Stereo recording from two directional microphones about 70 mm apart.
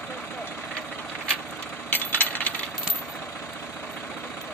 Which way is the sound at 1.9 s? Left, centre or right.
Left.